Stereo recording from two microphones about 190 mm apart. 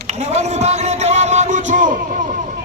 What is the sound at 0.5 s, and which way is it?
Speech, 35° right (ahead or behind).